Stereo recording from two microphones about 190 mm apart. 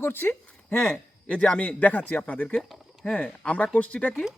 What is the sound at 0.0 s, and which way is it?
A man's voice, 10° left (ahead or behind).